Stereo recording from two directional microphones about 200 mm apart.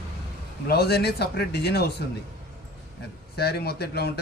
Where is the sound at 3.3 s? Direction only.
55° left (ahead or behind).